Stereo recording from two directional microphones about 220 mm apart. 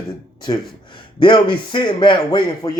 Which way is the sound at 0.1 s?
20° left (ahead or behind).